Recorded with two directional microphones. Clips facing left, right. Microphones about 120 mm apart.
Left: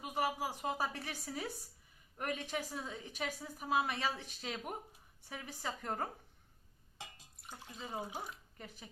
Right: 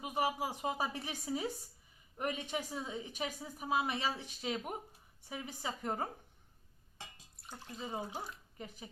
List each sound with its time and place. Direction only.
0.0 s a woman's voice: 15° right (ahead or behind)
7.8 s a woman's voice: 10° right (ahead or behind)
8.0 s speech: 10° left (ahead or behind)
8.5 s a woman's voice: 15° right (ahead or behind)